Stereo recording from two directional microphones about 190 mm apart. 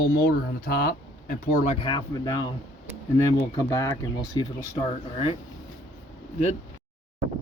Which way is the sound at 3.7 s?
15° left (ahead or behind).